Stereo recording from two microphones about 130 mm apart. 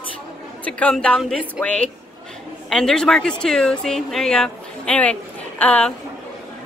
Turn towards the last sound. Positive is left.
turn(degrees=10)  # may be behind; listen again after turning